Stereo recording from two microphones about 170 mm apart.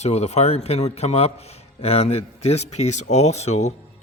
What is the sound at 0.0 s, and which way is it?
A man's voice, 40° left (ahead or behind).